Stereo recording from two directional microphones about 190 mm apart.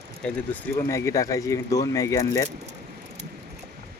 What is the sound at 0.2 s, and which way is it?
Speech, 5° left (ahead or behind).